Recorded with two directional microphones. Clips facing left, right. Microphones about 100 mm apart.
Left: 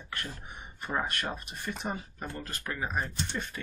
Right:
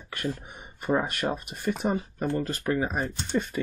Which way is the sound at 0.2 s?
15° right (ahead or behind).